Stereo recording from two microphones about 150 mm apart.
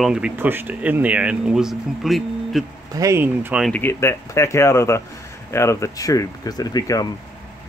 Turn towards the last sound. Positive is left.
turn(degrees=25)  # may be behind; listen again after turning